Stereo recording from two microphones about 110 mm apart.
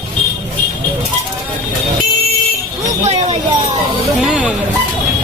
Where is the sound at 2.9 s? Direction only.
90° right.